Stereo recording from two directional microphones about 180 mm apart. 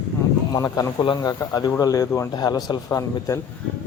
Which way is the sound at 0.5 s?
20° left (ahead or behind).